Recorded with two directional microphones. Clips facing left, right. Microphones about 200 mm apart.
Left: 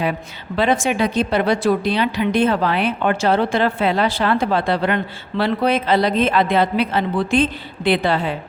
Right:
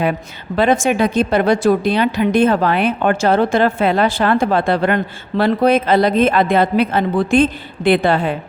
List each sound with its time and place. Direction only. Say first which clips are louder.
0.0 s a woman's voice: right 3 dB; 50° right (ahead or behind)